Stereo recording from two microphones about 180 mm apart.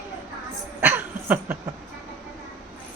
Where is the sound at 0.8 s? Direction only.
10° right (ahead or behind).